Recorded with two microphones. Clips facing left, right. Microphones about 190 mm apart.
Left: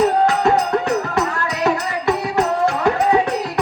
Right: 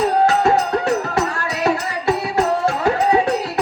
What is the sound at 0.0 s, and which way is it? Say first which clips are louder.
Music: even; 20° left (ahead or behind).